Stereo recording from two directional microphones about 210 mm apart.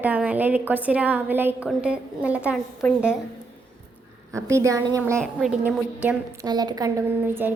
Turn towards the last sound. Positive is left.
turn(degrees=-10)  # may be behind; listen again after turning